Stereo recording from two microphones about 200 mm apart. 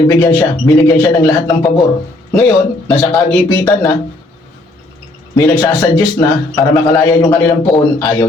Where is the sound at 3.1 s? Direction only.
10° left (ahead or behind).